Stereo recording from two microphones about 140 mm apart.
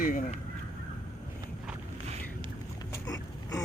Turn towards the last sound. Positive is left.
turn(degrees=25)  # may be behind; listen again after turning